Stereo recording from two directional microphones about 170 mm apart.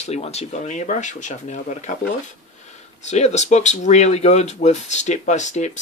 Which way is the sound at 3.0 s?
40° left (ahead or behind).